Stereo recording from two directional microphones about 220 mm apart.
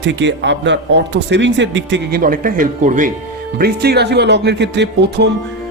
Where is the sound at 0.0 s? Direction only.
55° right (ahead or behind); by 3.1 s 35° right (ahead or behind).